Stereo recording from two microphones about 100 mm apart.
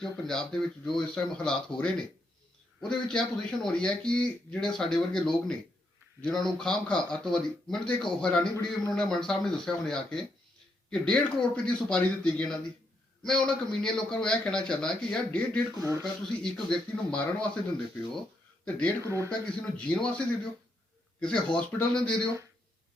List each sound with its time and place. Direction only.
0.0 s speech: 5° left (ahead or behind)
8.5 s a man's voice: 40° left (ahead or behind)
8.9 s speech: 5° left (ahead or behind)
15.7 s speech: 35° right (ahead or behind)
16.2 s speech: 10° left (ahead or behind)
18.6 s speech: 10° left (ahead or behind)
19.0 s speech: 30° right (ahead or behind)
19.5 s speech: 10° left (ahead or behind)